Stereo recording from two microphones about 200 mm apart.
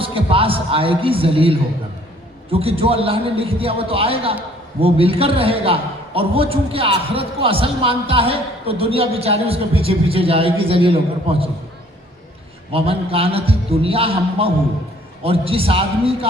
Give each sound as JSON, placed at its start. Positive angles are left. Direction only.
{"t": 0.0, "sound": "a man's voice", "side_deg": -25}
{"t": 12.7, "sound": "a man's voice", "side_deg": -30}